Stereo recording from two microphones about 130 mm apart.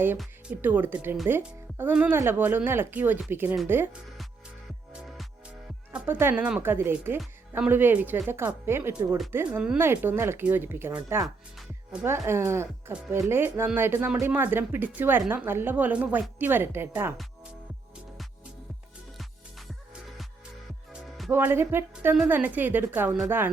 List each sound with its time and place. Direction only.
0.6 s a woman's voice: 15° right (ahead or behind)
5.9 s a woman's voice: 15° right (ahead or behind)
19.1 s music: centre (ahead or behind)
21.2 s a woman's voice: 15° right (ahead or behind)